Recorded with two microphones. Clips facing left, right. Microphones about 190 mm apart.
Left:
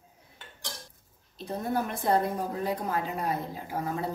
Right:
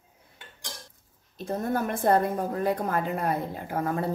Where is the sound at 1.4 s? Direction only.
50° right (ahead or behind).